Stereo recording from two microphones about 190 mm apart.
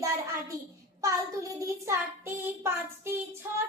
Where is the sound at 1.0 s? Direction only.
15° right (ahead or behind).